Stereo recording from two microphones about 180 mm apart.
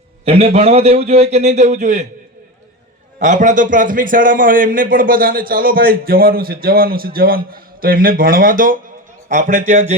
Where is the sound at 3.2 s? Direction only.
45° right (ahead or behind).